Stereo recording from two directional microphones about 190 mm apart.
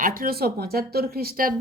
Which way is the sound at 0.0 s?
50° right (ahead or behind).